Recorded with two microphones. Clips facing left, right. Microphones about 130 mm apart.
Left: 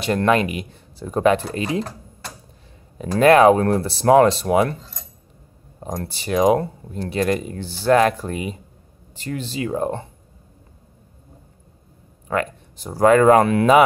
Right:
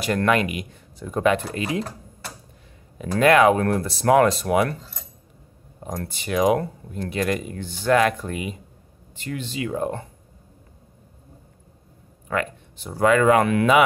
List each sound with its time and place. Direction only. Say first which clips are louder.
0.0 s speech: left 3 dB; 25° left (ahead or behind)
3.0 s speech: left 4 dB; 35° left (ahead or behind)
5.8 s speech: left 2 dB; 25° left (ahead or behind)
12.3 s speech: left 3 dB; 35° left (ahead or behind)